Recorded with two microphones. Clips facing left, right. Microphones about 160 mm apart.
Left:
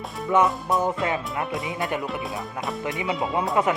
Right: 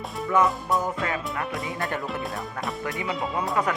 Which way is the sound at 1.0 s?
25° left (ahead or behind).